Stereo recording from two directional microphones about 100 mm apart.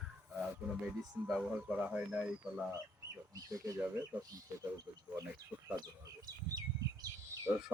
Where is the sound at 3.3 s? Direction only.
35° right (ahead or behind).